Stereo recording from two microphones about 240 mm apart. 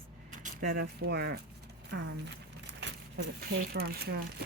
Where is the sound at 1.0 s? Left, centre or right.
Right.